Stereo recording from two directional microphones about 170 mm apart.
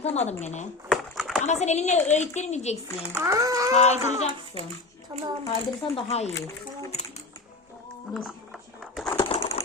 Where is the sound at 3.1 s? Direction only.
20° right (ahead or behind).